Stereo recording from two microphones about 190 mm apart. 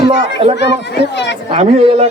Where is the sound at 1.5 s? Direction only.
30° right (ahead or behind).